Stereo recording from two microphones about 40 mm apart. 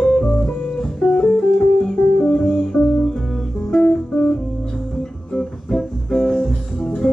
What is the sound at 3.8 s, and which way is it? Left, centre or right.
Music, left.